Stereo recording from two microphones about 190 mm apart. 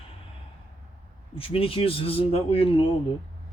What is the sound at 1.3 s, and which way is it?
Speech, 30° left (ahead or behind).